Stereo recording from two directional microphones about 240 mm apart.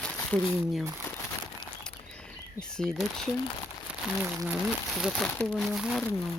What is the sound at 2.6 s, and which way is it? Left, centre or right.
Speech, centre.